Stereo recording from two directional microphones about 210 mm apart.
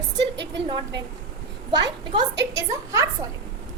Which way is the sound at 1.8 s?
20° right (ahead or behind).